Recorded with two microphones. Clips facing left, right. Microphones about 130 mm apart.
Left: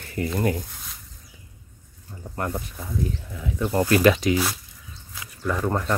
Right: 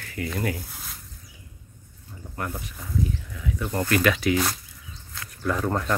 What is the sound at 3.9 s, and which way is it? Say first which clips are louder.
Speech: left 3 dB; 30° left (ahead or behind).